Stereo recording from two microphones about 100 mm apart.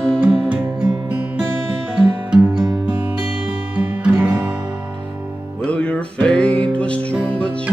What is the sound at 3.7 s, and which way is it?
Guitar, 15° right (ahead or behind).